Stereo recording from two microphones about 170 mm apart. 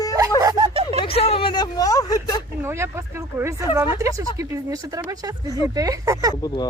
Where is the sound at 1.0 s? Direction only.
35° left (ahead or behind); by 2.4 s 20° left (ahead or behind).